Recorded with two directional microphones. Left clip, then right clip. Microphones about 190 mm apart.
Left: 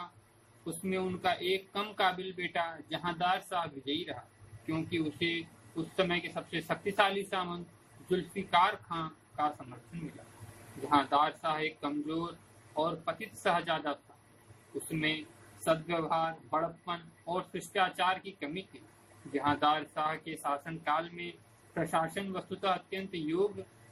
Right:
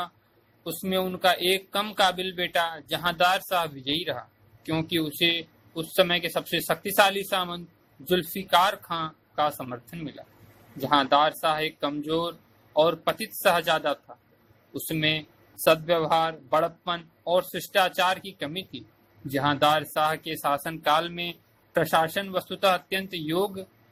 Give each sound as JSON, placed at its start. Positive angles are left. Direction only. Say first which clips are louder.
{"t": 0.6, "sound": "speech", "louder": "right 8 dB", "side_deg": -45}
{"t": 10.8, "sound": "speech", "louder": "right 7 dB", "side_deg": -45}
{"t": 15.6, "sound": "speech", "louder": "right 10 dB", "side_deg": -45}